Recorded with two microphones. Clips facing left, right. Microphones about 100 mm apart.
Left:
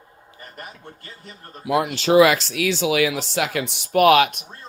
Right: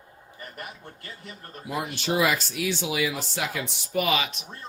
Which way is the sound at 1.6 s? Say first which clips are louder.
Left 9 dB; 90° left.